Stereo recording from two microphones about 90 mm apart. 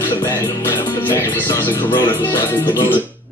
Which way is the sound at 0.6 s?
25° left (ahead or behind).